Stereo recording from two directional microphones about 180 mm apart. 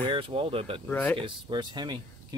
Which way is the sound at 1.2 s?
25° right (ahead or behind).